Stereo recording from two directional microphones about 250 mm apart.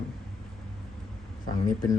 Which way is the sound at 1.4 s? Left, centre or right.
Left.